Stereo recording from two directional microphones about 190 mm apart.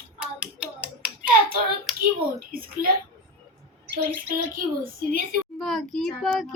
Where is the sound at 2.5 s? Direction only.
50° right (ahead or behind).